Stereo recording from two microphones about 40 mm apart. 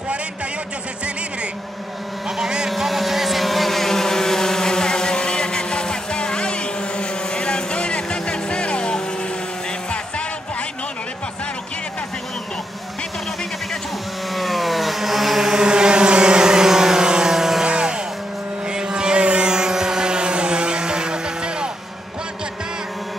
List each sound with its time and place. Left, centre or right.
2.2 s vehicle: centre
2.8 s vehicle: centre; by 9.0 s left
14.3 s vehicle: centre; by 21.6 s right